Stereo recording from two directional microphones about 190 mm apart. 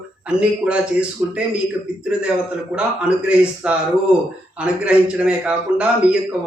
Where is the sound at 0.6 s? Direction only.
5° right (ahead or behind).